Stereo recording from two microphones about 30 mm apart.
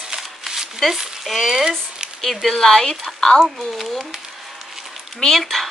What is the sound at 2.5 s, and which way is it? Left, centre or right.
Speech, centre.